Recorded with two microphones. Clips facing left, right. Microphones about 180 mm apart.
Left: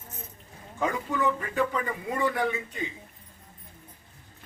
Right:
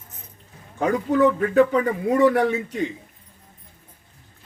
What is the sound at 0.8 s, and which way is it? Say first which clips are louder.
A man's voice: right 9 dB; 60° right (ahead or behind).